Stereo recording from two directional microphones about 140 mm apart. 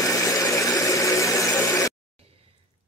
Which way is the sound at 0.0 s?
25° left (ahead or behind).